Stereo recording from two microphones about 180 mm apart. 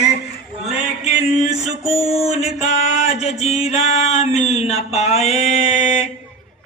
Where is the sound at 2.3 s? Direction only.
35° left (ahead or behind).